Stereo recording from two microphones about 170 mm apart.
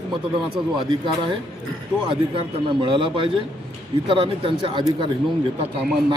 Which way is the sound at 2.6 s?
30° right (ahead or behind).